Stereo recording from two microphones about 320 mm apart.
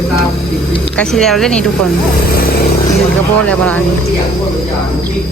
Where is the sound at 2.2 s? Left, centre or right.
Left.